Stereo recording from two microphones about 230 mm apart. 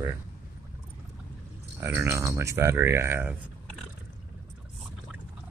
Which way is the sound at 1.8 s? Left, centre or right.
Centre.